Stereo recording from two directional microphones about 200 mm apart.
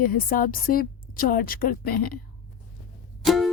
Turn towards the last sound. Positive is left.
turn(degrees=0)  # may be behind; listen again after turning